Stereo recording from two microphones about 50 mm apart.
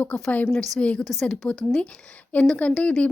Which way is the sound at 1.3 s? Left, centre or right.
Left.